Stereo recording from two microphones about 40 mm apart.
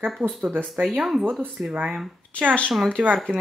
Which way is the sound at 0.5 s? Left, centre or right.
Right.